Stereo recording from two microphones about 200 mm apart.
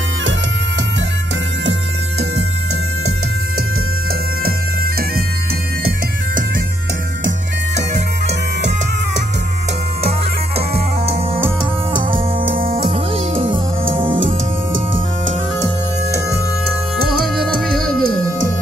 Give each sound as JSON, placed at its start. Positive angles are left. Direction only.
{"t": 1.7, "sound": "music", "side_deg": -70}
{"t": 4.5, "sound": "bagpipes", "side_deg": -50}
{"t": 10.7, "sound": "music", "side_deg": -30}
{"t": 12.6, "sound": "music", "side_deg": -25}
{"t": 17.4, "sound": "music", "side_deg": 0}
{"t": 18.0, "sound": "music", "side_deg": -90}